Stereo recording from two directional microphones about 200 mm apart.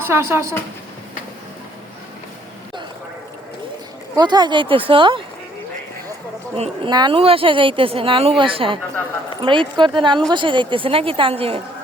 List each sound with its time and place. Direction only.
0.0 s speech: 15° right (ahead or behind)
4.1 s a woman's voice: 20° right (ahead or behind)
6.6 s a woman's voice: 25° right (ahead or behind)